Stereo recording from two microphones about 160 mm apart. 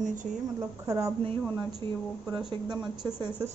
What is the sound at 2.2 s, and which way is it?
Speech, 5° right (ahead or behind).